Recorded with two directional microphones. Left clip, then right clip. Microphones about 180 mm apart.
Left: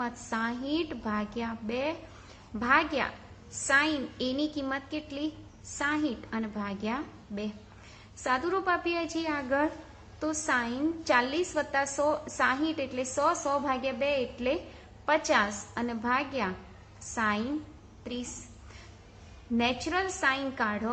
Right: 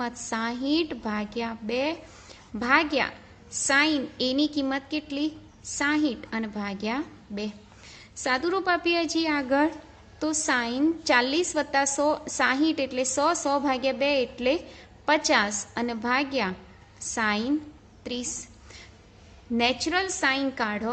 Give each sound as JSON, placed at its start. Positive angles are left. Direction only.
{"t": 0.0, "sound": "a woman's voice", "side_deg": -45}
{"t": 19.5, "sound": "a woman's voice", "side_deg": -45}